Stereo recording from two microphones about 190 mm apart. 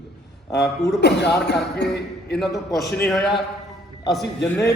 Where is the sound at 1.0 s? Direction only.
60° left (ahead or behind).